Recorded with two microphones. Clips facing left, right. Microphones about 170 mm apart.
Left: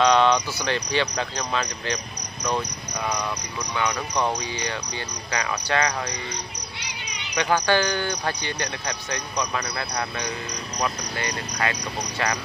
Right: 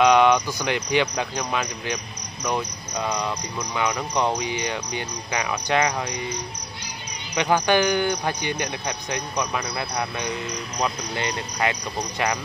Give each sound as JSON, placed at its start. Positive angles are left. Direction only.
{"t": 0.0, "sound": "speech", "side_deg": -10}
{"t": 3.7, "sound": "speech", "side_deg": -10}
{"t": 7.3, "sound": "speech", "side_deg": -15}
{"t": 11.1, "sound": "speech", "side_deg": -25}